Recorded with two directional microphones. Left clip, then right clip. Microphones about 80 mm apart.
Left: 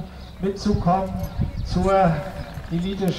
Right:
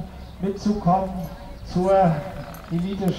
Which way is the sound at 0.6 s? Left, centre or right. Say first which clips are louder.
Right 1 dB; left.